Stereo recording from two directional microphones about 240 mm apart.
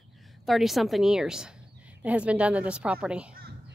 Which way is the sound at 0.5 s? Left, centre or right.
Centre.